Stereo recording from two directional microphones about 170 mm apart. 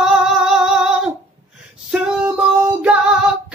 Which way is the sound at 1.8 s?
5° right (ahead or behind).